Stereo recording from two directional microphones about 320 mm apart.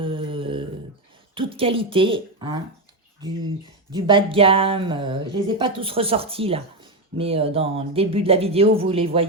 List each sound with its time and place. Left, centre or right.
0.0 s a sound: centre
1.4 s speech: centre
3.9 s speech: centre